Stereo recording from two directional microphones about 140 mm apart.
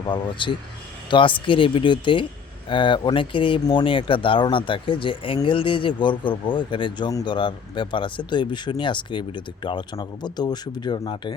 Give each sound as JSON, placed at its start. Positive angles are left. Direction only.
{"t": 0.1, "sound": "speech", "side_deg": 35}